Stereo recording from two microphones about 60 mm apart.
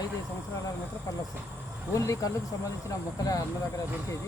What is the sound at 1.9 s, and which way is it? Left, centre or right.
Speech, left.